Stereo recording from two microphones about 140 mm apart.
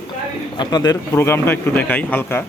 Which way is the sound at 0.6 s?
30° left (ahead or behind).